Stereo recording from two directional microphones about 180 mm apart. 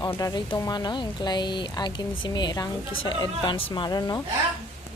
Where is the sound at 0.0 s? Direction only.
20° left (ahead or behind).